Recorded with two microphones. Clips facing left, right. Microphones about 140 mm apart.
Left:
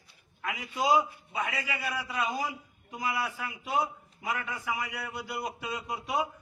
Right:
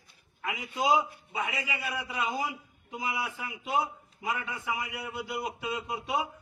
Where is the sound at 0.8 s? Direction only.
20° right (ahead or behind).